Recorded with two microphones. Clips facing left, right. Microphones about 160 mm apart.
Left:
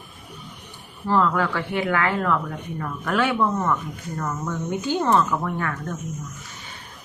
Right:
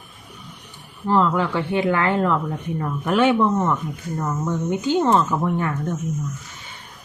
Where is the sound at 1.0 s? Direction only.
20° right (ahead or behind).